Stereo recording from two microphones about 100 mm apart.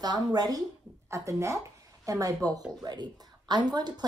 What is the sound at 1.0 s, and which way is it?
A woman's voice, 30° right (ahead or behind).